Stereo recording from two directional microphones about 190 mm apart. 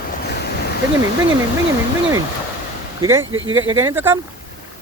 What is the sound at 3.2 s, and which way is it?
Speech, 90° right.